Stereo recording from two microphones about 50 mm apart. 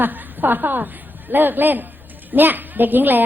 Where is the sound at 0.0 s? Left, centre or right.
Right.